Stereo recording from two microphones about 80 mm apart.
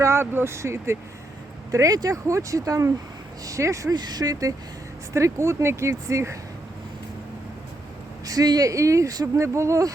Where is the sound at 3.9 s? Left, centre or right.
Right.